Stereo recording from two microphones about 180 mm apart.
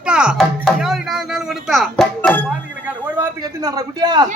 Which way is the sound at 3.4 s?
20° right (ahead or behind).